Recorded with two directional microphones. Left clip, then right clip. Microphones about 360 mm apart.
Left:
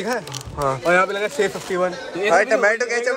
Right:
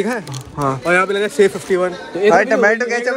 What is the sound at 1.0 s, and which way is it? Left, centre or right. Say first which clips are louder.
Speech: right 6 dB; right.